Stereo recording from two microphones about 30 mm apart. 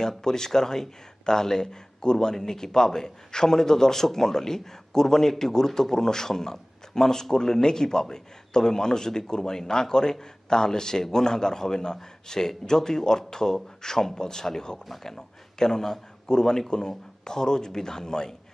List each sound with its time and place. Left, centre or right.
0.2 s a man's voice: centre